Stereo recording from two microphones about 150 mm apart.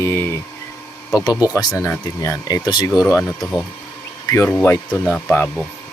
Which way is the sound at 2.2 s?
25° left (ahead or behind).